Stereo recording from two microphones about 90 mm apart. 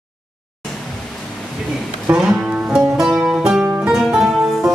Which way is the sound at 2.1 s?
10° right (ahead or behind).